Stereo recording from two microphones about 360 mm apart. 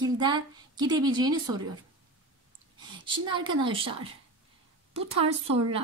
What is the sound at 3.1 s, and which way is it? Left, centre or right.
Speech, centre.